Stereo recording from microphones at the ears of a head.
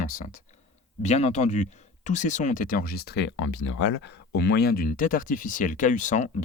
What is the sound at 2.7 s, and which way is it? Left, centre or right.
Speech, left.